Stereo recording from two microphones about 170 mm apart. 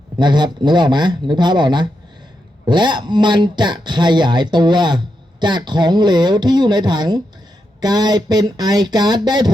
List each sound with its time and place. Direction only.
0.2 s speech: 25° right (ahead or behind)